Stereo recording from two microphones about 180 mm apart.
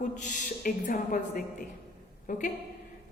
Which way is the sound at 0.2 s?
45° left (ahead or behind).